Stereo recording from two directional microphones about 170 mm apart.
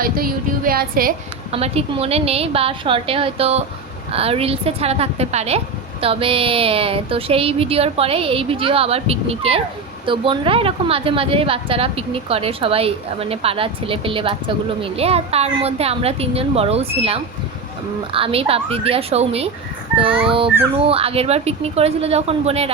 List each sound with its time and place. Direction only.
0.0 s speech: 60° right (ahead or behind)
1.5 s a woman's voice: 35° right (ahead or behind)